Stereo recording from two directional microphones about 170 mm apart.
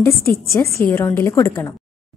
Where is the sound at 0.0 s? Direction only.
15° left (ahead or behind).